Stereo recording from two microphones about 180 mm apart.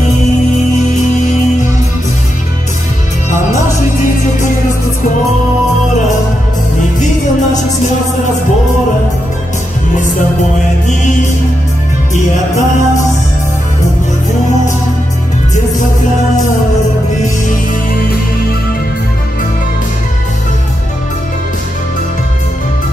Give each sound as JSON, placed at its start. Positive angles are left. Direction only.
{"t": 12.1, "sound": "music", "side_deg": 45}